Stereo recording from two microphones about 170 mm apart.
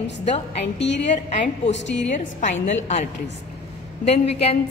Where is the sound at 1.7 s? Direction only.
90° left.